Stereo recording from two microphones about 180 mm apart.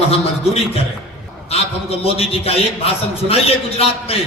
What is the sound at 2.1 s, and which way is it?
A man's voice, 35° left (ahead or behind).